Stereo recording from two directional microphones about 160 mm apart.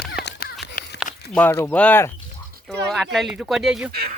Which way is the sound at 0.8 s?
55° left (ahead or behind).